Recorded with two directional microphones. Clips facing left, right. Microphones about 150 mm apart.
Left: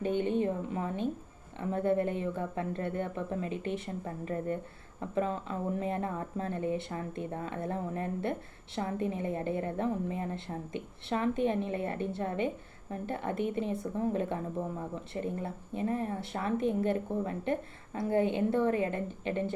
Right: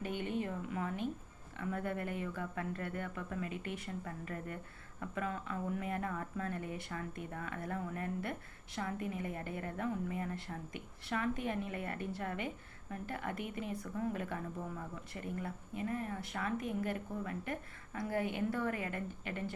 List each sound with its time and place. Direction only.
0.0 s speech: 25° left (ahead or behind)